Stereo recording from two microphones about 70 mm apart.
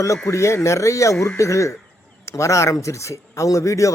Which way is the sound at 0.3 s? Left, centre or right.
Left.